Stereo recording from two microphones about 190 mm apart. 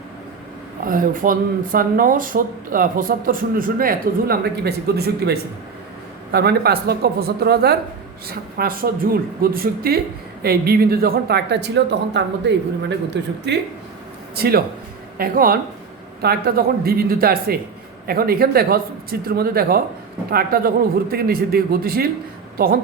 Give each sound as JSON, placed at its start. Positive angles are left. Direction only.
{"t": 0.9, "sound": "a woman's voice", "side_deg": -45}
{"t": 14.3, "sound": "a woman's voice", "side_deg": -55}